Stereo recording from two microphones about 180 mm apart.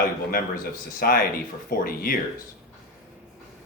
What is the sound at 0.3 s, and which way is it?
Speech, 55° left (ahead or behind).